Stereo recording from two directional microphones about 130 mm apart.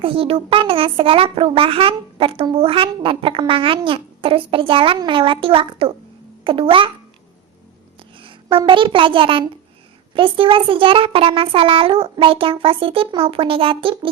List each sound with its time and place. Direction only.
0.0 s a child's voice: 45° right (ahead or behind)
8.2 s a child's voice: 40° right (ahead or behind)